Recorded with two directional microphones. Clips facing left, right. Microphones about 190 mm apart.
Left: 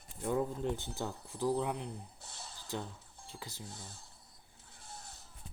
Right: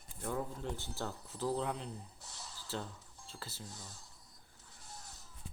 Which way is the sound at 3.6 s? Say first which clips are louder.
Left 2 dB; 30° left (ahead or behind).